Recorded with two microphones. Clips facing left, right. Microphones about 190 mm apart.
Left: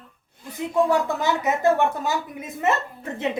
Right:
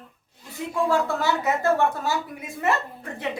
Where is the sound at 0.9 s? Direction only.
20° left (ahead or behind).